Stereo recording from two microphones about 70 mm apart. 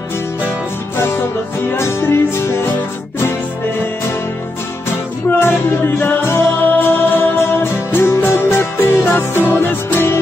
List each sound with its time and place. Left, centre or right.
0.9 s music: left
5.4 s music: left